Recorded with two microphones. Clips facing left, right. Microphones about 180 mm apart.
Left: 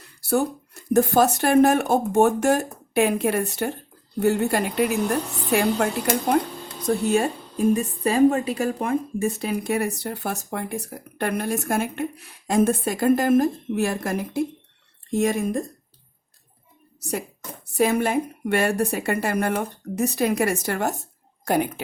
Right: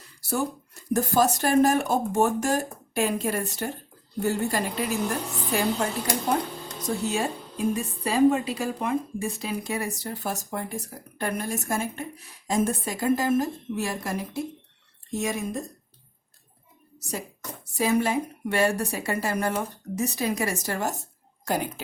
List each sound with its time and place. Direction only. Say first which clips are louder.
0.0 s a woman's voice: left 6 dB; 60° left (ahead or behind)
17.7 s a woman's voice: left 3 dB; 55° left (ahead or behind)